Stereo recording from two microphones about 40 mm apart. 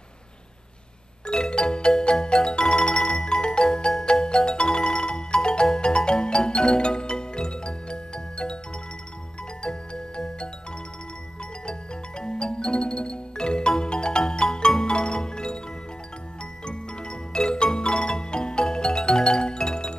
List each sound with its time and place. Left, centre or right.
1.2 s music: left
9.6 s music: left
12.2 s music: left
16.6 s music: left